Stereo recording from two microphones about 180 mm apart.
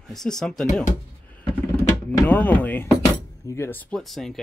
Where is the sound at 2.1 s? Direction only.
10° left (ahead or behind).